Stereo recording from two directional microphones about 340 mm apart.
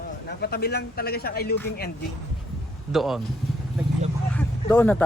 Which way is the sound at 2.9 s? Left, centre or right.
Centre.